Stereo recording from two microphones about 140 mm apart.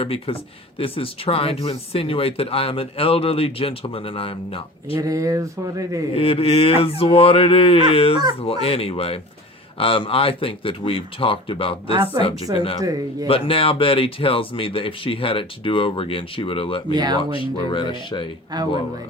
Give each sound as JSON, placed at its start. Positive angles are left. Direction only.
{"t": 0.0, "sound": "speech", "side_deg": 45}
{"t": 4.9, "sound": "speech", "side_deg": -25}
{"t": 6.1, "sound": "speech", "side_deg": 40}
{"t": 12.2, "sound": "speech", "side_deg": -30}
{"t": 12.5, "sound": "speech", "side_deg": 40}
{"t": 12.8, "sound": "speech", "side_deg": -25}
{"t": 13.2, "sound": "speech", "side_deg": 40}
{"t": 16.9, "sound": "speech", "side_deg": -30}
{"t": 17.3, "sound": "speech", "side_deg": 35}
{"t": 18.5, "sound": "speech", "side_deg": -30}